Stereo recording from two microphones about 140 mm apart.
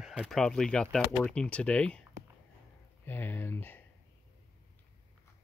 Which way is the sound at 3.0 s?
15° left (ahead or behind).